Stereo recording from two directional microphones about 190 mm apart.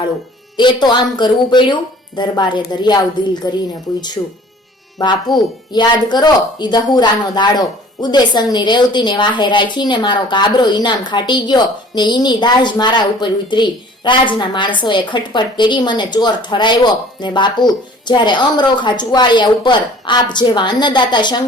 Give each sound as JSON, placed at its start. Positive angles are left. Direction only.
{"t": 0.5, "sound": "a woman's voice", "side_deg": 25}